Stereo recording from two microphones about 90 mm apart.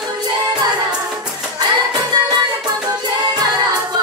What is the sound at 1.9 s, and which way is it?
Music, 50° right (ahead or behind).